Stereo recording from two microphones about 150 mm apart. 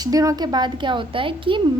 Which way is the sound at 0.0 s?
25° right (ahead or behind).